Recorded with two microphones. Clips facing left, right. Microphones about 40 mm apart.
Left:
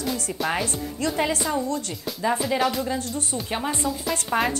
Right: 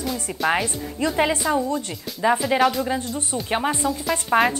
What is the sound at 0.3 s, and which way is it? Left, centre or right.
Speech, centre.